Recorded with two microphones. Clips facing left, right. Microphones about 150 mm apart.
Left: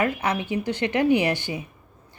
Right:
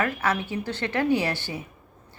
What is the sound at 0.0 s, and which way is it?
Speech, 15° left (ahead or behind).